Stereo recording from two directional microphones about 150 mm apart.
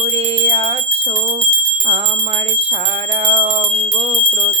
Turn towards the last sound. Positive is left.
turn(degrees=-35)  # may be behind; listen again after turning